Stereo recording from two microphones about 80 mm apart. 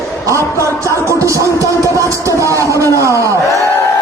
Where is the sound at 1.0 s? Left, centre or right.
Right.